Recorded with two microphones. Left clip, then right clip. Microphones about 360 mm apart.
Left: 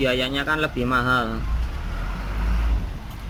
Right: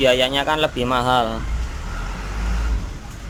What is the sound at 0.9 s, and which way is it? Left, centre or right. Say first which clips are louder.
Speech: right 2 dB; right.